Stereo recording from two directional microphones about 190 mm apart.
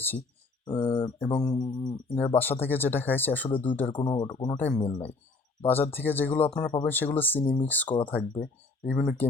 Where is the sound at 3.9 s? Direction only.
25° left (ahead or behind).